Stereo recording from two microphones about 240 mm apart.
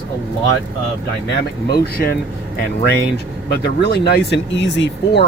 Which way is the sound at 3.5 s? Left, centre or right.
Left.